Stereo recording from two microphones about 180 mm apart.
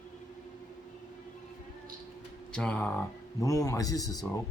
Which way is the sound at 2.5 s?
5° left (ahead or behind).